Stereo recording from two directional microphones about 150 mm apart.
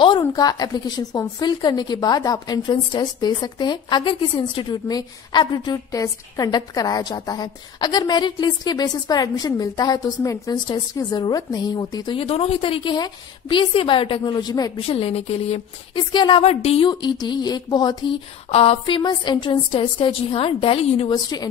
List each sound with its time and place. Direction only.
0.2 s a woman's voice: 25° left (ahead or behind)
14.9 s a woman's voice: 40° left (ahead or behind)
18.5 s a woman's voice: 40° left (ahead or behind)